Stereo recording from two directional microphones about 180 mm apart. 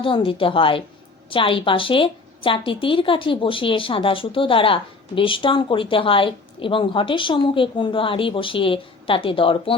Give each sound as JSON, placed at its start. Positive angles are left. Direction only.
{"t": 0.0, "sound": "a woman's voice", "side_deg": 30}